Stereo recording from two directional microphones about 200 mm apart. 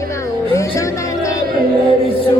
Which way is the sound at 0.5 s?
15° left (ahead or behind).